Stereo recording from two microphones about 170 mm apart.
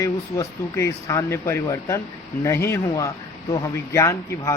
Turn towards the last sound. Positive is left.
turn(degrees=20)  # may be behind; listen again after turning